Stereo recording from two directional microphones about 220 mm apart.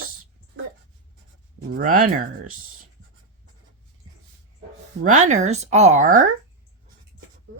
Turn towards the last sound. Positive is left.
turn(degrees=-40)  # may be behind; listen again after turning